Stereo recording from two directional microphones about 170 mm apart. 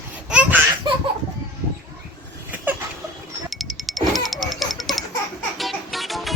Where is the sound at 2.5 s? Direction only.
10° right (ahead or behind).